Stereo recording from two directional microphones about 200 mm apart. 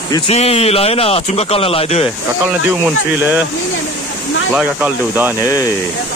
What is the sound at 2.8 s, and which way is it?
Speech, 10° right (ahead or behind).